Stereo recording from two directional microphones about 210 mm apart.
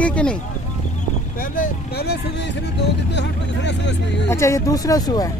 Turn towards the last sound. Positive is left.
turn(degrees=20)  # may be behind; listen again after turning